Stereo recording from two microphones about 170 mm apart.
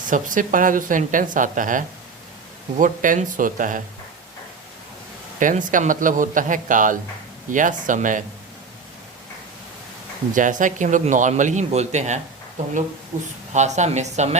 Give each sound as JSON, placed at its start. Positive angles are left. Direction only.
{"t": 0.0, "sound": "speech", "side_deg": -50}
{"t": 5.4, "sound": "speech", "side_deg": -50}
{"t": 10.3, "sound": "speech", "side_deg": -50}
{"t": 13.5, "sound": "speech", "side_deg": -45}